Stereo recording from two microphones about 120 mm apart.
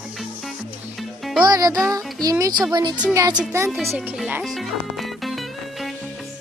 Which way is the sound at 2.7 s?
40° right (ahead or behind).